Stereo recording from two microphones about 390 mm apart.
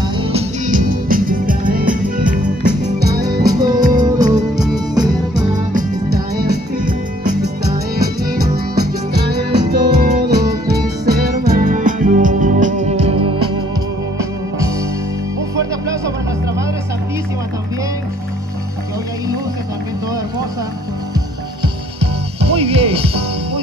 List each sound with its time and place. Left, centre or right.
0.2 s music: centre
3.5 s music: centre
22.0 s music: centre